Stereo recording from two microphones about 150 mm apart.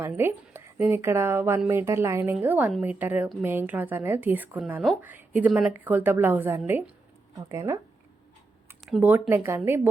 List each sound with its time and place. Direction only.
0.1 s a woman's voice: 15° right (ahead or behind)
8.9 s a woman's voice: 10° right (ahead or behind)